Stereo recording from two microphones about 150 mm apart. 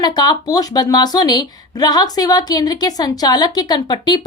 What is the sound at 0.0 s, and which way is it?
Speech, 25° left (ahead or behind).